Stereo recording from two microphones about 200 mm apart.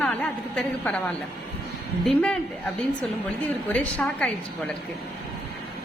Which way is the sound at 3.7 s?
5° left (ahead or behind).